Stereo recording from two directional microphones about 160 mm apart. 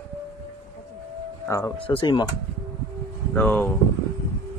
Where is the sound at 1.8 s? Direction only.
30° left (ahead or behind).